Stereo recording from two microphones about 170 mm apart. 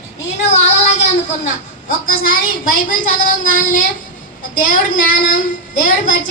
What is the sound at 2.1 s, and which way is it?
A woman's voice, 55° left (ahead or behind).